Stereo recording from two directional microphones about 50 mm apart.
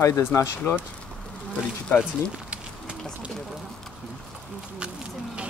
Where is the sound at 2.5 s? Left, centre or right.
Right.